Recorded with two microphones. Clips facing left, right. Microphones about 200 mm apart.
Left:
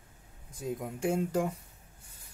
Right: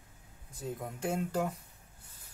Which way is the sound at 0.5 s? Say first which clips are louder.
Left 3 dB; 10° left (ahead or behind).